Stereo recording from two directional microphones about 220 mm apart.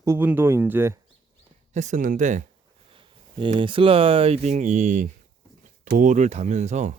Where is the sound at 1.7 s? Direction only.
35° right (ahead or behind).